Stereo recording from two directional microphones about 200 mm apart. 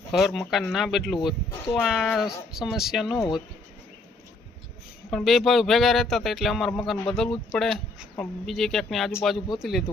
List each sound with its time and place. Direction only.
0.1 s speech: centre (ahead or behind)
3.2 s speech: 20° left (ahead or behind)
5.1 s speech: centre (ahead or behind)